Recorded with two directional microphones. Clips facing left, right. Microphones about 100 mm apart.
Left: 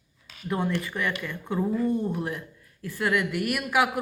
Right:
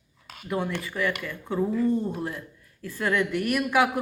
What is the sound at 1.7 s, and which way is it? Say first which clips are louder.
A woman's voice: even; 15° left (ahead or behind).